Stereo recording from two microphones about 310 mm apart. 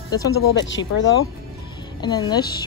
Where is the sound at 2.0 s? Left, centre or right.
Centre.